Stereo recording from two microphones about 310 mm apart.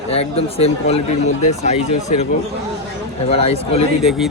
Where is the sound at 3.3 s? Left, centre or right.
Centre.